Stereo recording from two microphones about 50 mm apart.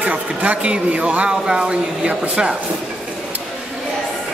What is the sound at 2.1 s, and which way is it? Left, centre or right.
Speech, right.